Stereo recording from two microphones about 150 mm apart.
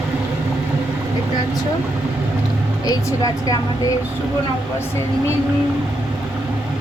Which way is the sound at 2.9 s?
25° left (ahead or behind).